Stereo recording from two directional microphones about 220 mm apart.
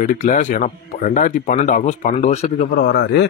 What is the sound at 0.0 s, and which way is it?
Speech, 35° left (ahead or behind).